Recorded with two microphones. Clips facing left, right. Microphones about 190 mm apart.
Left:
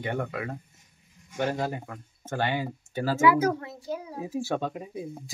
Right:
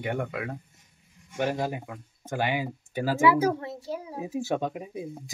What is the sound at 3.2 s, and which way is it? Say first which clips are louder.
Speech: even; 30° right (ahead or behind).